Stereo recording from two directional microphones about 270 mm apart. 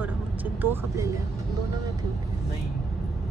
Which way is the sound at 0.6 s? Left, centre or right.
Centre.